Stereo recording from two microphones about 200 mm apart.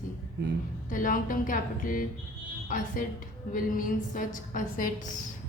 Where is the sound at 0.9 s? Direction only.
45° left (ahead or behind).